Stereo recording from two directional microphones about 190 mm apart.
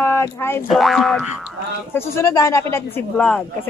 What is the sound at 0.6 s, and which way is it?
Boing, centre (ahead or behind).